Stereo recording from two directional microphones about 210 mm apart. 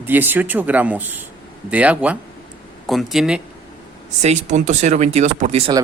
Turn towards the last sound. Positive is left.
turn(degrees=-30)  # may be behind; listen again after turning